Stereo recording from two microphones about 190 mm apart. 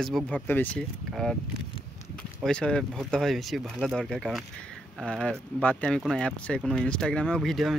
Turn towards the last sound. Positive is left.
turn(degrees=0)  # may be behind; listen again after turning